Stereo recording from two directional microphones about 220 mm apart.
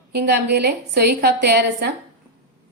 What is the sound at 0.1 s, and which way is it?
A woman's voice, 50° right (ahead or behind).